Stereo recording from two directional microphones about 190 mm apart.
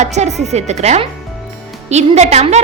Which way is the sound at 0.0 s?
35° right (ahead or behind).